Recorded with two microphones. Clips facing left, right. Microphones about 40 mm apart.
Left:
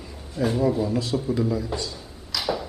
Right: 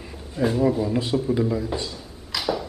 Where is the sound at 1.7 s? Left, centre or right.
Right.